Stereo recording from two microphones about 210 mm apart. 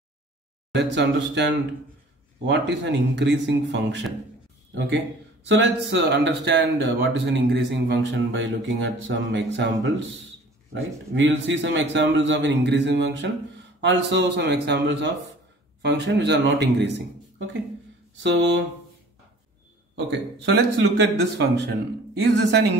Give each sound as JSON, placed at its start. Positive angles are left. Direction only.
{"t": 0.7, "sound": "speech", "side_deg": -55}
{"t": 18.2, "sound": "speech", "side_deg": -60}
{"t": 20.1, "sound": "speech", "side_deg": -55}